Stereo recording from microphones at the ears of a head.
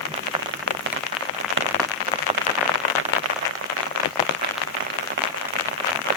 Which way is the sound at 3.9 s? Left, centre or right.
Left.